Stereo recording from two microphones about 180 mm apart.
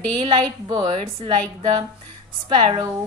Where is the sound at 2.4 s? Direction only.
30° right (ahead or behind).